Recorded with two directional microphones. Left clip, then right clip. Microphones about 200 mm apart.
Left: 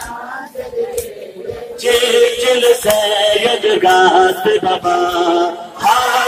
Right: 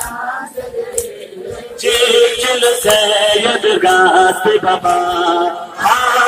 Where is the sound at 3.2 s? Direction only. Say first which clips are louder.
Right 1 dB; 10° left (ahead or behind).